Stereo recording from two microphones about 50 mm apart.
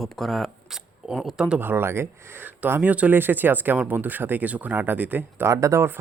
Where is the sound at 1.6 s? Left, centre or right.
Right.